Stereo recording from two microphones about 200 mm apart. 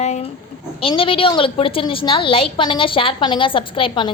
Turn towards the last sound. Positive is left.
turn(degrees=25)  # may be behind; listen again after turning